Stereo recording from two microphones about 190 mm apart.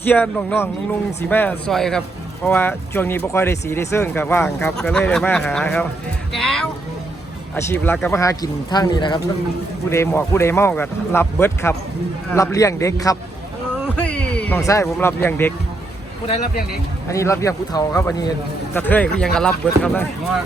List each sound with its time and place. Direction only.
0.0 s speech: 10° left (ahead or behind)
13.9 s speech: 5° left (ahead or behind)
17.1 s speech: 15° left (ahead or behind)